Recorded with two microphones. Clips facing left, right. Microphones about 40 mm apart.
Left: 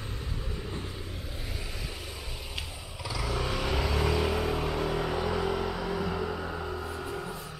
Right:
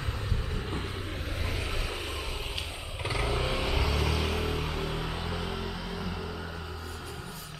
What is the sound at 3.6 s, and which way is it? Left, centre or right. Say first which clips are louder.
Vehicle: left 1 dB; centre.